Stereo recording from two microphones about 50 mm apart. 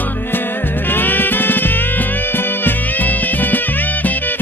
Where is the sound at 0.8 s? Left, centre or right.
Left.